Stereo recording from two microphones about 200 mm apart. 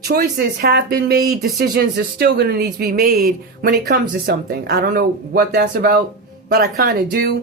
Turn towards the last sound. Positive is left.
turn(degrees=-45)  # may be behind; listen again after turning